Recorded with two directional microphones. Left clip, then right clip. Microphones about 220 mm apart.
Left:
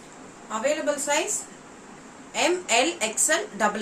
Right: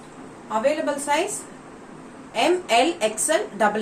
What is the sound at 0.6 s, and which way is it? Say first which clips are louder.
Speech: right 1 dB; 15° left (ahead or behind).